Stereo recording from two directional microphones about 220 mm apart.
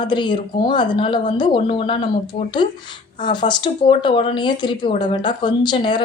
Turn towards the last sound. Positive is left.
turn(degrees=20)  # may be behind; listen again after turning